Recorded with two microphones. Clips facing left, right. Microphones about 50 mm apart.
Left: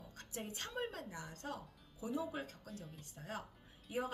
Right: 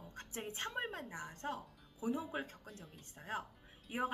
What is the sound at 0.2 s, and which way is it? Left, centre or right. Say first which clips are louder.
A woman's voice: right 3 dB; right.